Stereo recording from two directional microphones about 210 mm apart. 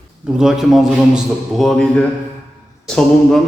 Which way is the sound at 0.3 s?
Centre (ahead or behind).